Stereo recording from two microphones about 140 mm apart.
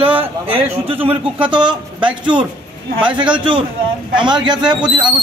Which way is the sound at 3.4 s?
35° right (ahead or behind).